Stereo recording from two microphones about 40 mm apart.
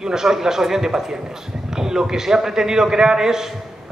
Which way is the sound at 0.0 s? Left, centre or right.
Centre.